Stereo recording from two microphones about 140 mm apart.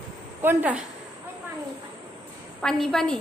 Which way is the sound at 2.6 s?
Centre (ahead or behind).